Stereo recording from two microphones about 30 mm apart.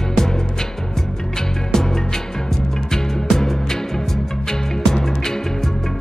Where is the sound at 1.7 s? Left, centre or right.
Centre.